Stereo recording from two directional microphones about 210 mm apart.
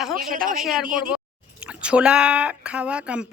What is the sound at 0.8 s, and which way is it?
Speech, 40° right (ahead or behind).